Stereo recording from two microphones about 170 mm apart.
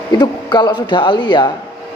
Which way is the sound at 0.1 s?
25° left (ahead or behind).